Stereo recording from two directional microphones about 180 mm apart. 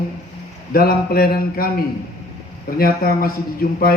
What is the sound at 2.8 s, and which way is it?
Mantra, 55° left (ahead or behind).